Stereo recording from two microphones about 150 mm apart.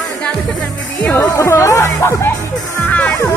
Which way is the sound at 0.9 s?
20° left (ahead or behind).